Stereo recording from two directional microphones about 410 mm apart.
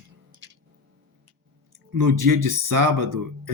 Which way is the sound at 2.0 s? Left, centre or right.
Right.